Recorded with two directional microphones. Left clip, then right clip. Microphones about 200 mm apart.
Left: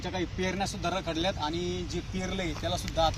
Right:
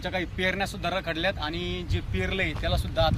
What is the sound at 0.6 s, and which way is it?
Speech, 15° right (ahead or behind).